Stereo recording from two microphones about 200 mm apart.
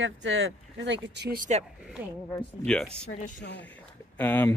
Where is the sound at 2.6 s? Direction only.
5° left (ahead or behind).